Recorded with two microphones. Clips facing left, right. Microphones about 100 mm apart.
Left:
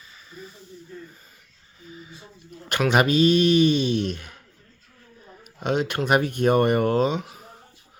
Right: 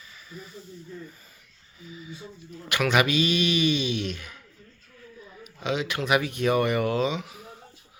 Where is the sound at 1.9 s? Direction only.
40° left (ahead or behind).